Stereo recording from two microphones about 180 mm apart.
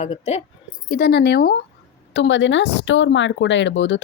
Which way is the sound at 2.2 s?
90° left.